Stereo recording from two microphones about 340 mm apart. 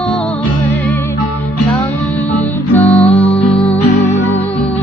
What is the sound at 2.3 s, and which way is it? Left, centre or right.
Music, centre.